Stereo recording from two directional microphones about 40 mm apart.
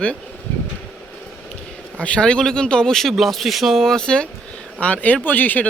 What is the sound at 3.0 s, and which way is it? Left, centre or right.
Speech, centre.